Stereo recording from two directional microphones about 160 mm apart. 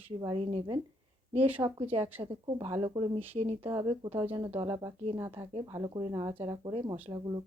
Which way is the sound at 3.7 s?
25° right (ahead or behind).